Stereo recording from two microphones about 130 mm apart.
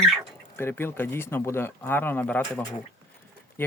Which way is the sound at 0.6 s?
20° left (ahead or behind).